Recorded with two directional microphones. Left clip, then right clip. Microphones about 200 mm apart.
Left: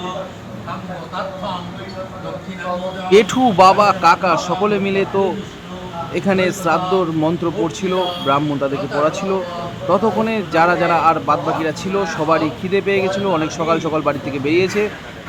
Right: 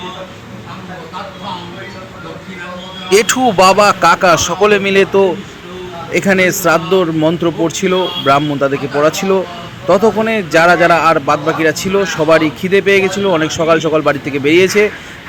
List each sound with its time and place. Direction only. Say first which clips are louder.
3.1 s speech: right 2 dB; 20° right (ahead or behind)